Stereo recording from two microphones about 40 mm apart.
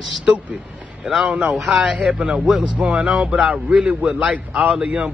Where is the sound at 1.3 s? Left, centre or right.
Right.